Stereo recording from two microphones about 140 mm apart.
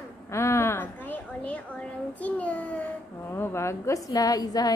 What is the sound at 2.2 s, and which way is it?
A child's voice, 10° left (ahead or behind).